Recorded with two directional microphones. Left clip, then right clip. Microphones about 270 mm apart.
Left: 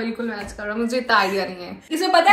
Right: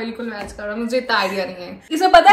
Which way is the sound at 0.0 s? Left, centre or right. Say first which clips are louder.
Even; centre.